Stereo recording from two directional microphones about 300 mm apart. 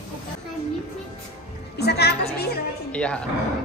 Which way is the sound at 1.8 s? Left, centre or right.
Left.